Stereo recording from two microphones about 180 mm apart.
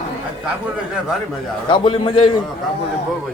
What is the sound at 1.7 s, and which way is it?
Speech, 30° left (ahead or behind).